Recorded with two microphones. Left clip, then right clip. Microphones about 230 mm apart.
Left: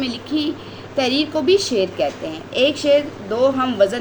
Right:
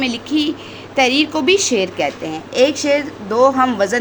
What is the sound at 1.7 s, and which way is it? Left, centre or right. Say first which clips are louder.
Speech: right 2 dB; right.